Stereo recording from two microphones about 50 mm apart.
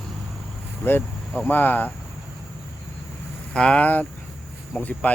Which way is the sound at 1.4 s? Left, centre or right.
Left.